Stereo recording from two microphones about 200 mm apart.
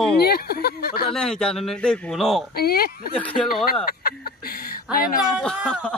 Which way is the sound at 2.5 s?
50° left (ahead or behind).